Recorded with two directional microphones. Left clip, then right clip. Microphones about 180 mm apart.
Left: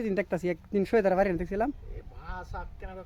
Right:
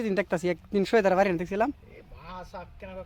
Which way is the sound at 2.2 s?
35° left (ahead or behind).